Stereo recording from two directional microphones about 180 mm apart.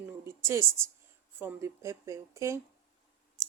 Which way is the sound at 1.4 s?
15° right (ahead or behind).